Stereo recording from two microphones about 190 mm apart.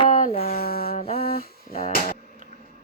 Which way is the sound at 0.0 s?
30° left (ahead or behind).